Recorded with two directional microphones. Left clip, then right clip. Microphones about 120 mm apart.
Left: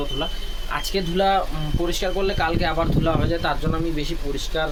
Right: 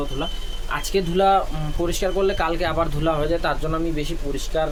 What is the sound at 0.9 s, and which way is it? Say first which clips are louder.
Speech: right 3 dB; 20° right (ahead or behind).